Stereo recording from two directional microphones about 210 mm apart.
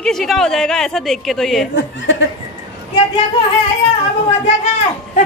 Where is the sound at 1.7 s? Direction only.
60° left (ahead or behind).